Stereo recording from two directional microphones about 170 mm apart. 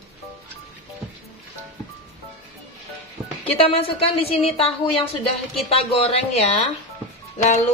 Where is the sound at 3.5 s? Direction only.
35° left (ahead or behind).